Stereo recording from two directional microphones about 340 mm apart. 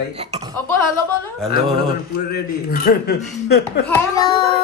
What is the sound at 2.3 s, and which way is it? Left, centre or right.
Speech, left.